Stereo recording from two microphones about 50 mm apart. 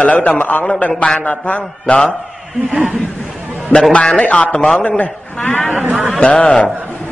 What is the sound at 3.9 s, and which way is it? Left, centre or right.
A man's voice, left.